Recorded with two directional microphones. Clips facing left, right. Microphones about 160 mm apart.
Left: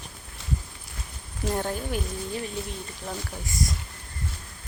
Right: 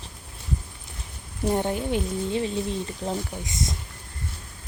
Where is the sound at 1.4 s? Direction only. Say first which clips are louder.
Right 4 dB; 20° right (ahead or behind).